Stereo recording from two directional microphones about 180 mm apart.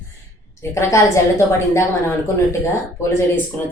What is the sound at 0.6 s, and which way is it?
A woman's voice, 15° left (ahead or behind).